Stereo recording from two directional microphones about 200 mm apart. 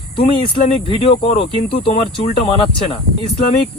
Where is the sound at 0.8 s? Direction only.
30° left (ahead or behind).